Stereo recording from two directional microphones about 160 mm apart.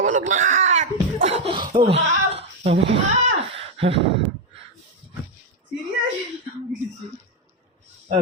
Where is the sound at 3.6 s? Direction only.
35° right (ahead or behind).